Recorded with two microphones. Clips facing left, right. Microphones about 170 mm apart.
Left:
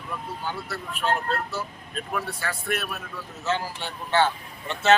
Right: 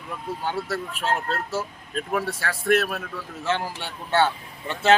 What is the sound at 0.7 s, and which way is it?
Speech, 90° right.